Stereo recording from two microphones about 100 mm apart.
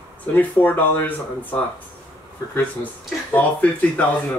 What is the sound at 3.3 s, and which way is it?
Speech, 15° left (ahead or behind).